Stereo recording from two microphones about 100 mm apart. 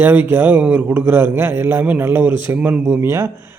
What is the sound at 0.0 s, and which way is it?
A man's voice, 20° right (ahead or behind).